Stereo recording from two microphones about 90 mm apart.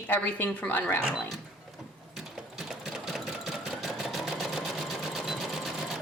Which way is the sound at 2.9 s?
5° right (ahead or behind).